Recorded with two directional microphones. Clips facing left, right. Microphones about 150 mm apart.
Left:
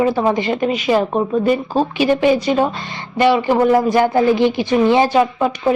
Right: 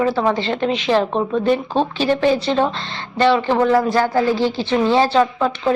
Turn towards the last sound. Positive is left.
turn(degrees=10)  # may be behind; listen again after turning